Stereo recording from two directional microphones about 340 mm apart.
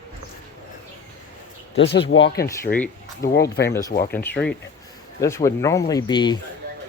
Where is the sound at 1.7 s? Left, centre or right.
Left.